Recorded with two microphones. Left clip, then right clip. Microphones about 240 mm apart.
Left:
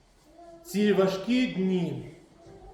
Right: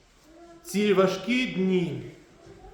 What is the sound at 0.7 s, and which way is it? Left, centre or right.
A man's voice, centre.